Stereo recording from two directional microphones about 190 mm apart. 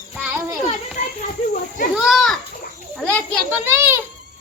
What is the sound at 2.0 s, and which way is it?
Children playing, centre (ahead or behind).